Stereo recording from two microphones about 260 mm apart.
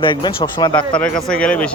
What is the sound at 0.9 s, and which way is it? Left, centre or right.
Speech, centre.